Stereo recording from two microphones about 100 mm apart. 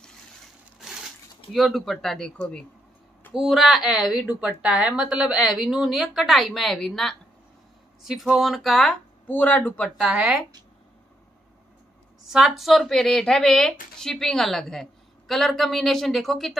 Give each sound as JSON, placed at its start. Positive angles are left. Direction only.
{"t": 0.7, "sound": "crushing", "side_deg": -5}
{"t": 1.5, "sound": "speech", "side_deg": 0}
{"t": 3.3, "sound": "speech", "side_deg": -5}
{"t": 9.3, "sound": "speech", "side_deg": 15}
{"t": 10.1, "sound": "speech", "side_deg": -10}
{"t": 12.3, "sound": "speech", "side_deg": -5}